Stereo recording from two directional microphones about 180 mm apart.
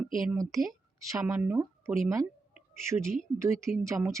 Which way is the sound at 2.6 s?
15° right (ahead or behind).